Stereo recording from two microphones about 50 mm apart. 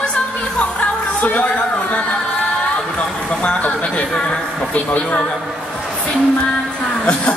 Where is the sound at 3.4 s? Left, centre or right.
Left.